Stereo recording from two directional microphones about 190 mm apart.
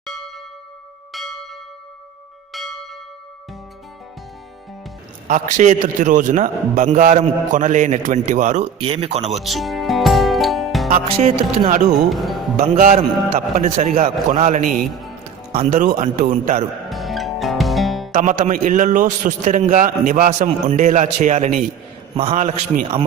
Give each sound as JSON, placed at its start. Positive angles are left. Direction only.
{"t": 1.1, "sound": "church bell", "side_deg": 0}
{"t": 2.5, "sound": "church bell", "side_deg": 0}
{"t": 5.3, "sound": "a man's voice", "side_deg": -40}
{"t": 9.4, "sound": "music", "side_deg": 0}
{"t": 10.8, "sound": "a man's voice", "side_deg": -40}
{"t": 11.9, "sound": "speech", "side_deg": 0}
{"t": 12.8, "sound": "a man's voice", "side_deg": -35}
{"t": 16.9, "sound": "music", "side_deg": 0}
{"t": 18.1, "sound": "a man's voice", "side_deg": -40}